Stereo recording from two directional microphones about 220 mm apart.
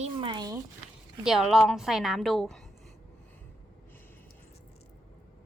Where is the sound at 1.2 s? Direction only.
Centre (ahead or behind).